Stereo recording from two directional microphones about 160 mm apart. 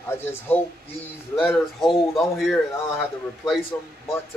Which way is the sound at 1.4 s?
Centre (ahead or behind).